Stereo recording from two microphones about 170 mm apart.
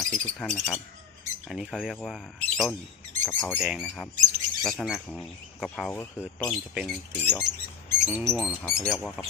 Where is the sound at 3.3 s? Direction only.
10° left (ahead or behind).